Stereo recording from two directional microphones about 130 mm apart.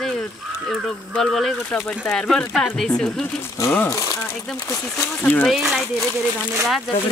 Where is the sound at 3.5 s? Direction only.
20° left (ahead or behind).